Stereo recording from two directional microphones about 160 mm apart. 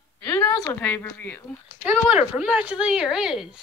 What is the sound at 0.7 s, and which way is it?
Speech, 15° left (ahead or behind).